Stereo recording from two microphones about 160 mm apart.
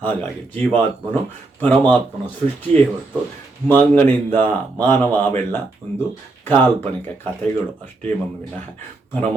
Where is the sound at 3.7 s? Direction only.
10° left (ahead or behind).